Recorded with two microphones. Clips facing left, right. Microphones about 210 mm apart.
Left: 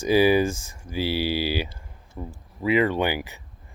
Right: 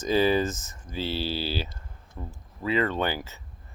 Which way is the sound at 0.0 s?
10° left (ahead or behind).